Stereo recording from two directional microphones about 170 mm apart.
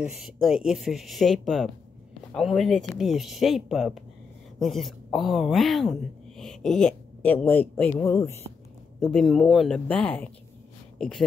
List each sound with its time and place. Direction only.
0.0 s a woman's voice: 5° right (ahead or behind); by 8.4 s 20° left (ahead or behind)
9.0 s a woman's voice: centre (ahead or behind)